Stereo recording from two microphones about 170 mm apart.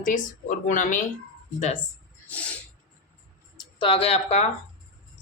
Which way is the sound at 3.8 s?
30° left (ahead or behind).